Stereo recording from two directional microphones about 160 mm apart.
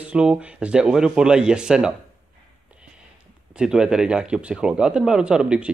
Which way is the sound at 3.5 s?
5° right (ahead or behind).